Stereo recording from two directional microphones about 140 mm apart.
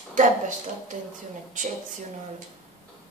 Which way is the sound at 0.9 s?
65° right (ahead or behind).